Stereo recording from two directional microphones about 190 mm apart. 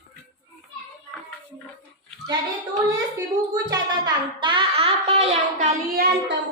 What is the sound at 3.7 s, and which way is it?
A child's voice, 25° right (ahead or behind).